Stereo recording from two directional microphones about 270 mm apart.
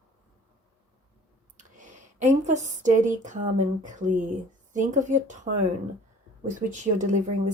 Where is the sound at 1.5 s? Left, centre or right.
Right.